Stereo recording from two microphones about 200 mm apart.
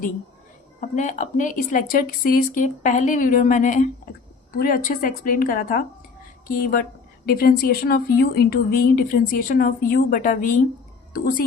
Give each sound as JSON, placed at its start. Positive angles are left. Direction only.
{"t": 0.8, "sound": "speech", "side_deg": 40}